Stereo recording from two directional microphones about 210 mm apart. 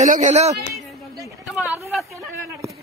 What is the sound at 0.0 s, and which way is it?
Speech, 35° right (ahead or behind).